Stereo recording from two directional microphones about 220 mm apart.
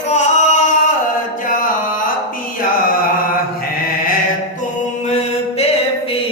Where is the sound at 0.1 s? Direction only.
30° left (ahead or behind).